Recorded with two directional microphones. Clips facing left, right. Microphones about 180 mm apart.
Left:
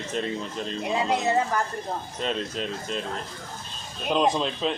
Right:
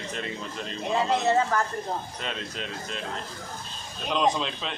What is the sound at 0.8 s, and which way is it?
Speech, 10° left (ahead or behind).